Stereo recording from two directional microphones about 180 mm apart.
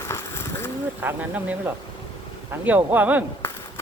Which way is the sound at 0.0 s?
15° left (ahead or behind).